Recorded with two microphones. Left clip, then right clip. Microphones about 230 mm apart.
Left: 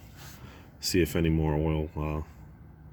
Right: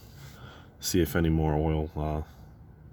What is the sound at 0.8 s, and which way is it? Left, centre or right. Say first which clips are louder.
Speech: even; centre.